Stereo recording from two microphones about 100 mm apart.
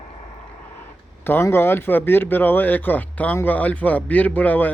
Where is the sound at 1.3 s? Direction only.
25° left (ahead or behind).